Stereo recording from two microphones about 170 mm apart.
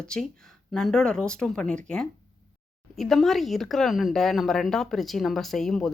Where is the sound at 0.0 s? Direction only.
5° left (ahead or behind).